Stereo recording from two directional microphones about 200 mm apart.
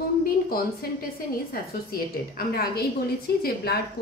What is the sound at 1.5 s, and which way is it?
A woman's voice, 50° left (ahead or behind).